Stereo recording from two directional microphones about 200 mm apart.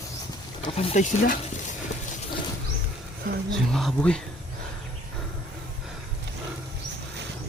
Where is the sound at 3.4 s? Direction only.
Centre (ahead or behind).